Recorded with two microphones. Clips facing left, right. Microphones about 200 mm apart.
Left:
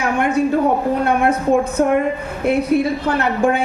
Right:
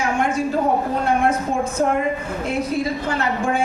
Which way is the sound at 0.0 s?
60° left (ahead or behind).